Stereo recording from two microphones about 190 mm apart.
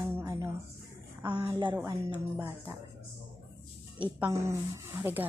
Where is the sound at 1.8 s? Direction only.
15° right (ahead or behind).